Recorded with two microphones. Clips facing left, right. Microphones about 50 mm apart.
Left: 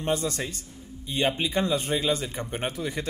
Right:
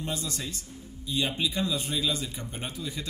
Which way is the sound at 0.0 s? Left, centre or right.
Left.